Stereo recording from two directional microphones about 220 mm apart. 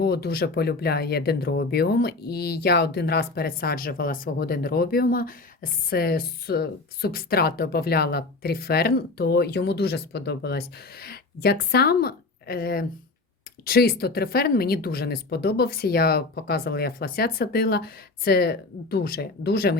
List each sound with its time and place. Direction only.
0.0 s speech: 45° left (ahead or behind)